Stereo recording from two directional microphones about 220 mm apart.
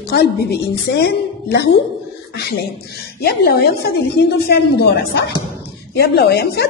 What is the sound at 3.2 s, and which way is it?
A woman's voice, 45° left (ahead or behind).